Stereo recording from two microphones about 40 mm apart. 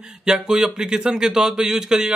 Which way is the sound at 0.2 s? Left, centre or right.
Centre.